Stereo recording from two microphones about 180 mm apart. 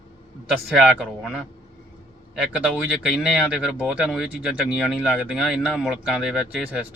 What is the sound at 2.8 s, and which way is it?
Speech, 5° right (ahead or behind).